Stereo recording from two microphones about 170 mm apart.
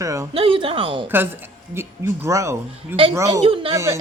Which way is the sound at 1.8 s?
15° right (ahead or behind).